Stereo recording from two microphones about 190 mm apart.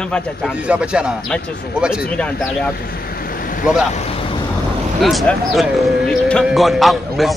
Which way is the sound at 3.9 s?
35° left (ahead or behind).